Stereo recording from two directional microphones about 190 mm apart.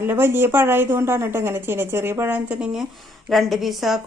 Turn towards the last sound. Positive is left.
turn(degrees=0)  # may be behind; listen again after turning